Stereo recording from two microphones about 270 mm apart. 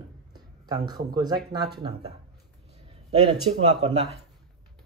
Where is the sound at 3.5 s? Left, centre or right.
Right.